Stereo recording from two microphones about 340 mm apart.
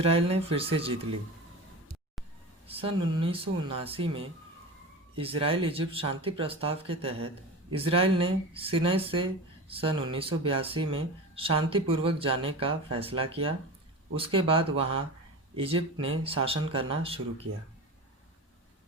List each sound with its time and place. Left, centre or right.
0.0 s speech: centre
2.6 s speech: centre